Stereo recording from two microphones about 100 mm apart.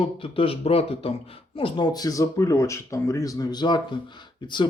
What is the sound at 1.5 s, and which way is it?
Speech, 55° left (ahead or behind).